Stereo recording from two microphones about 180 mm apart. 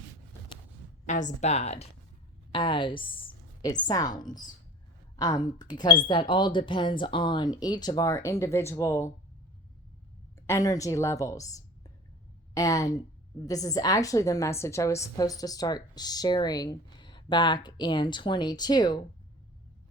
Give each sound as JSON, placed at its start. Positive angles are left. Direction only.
{"t": 1.0, "sound": "a woman's voice", "side_deg": 45}
{"t": 10.4, "sound": "a woman's voice", "side_deg": 15}